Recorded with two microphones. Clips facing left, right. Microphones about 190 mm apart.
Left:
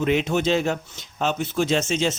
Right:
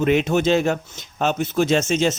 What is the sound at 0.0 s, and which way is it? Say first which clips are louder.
Speech: right 3 dB; 55° right (ahead or behind).